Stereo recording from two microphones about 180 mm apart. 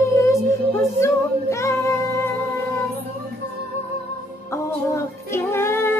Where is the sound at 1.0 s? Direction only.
15° left (ahead or behind).